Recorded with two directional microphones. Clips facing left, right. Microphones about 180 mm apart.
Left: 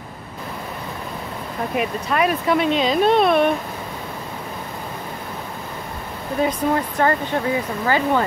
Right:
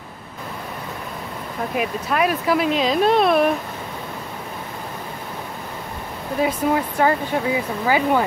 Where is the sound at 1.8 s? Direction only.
Centre (ahead or behind).